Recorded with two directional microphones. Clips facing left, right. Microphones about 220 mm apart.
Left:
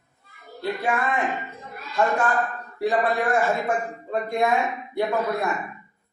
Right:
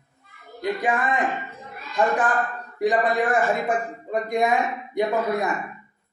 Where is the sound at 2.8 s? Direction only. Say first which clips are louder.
Right 2 dB; 15° right (ahead or behind).